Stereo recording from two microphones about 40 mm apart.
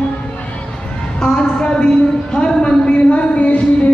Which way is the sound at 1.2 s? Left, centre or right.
Left.